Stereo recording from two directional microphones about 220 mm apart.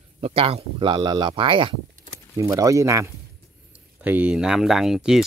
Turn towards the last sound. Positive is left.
turn(degrees=0)  # may be behind; listen again after turning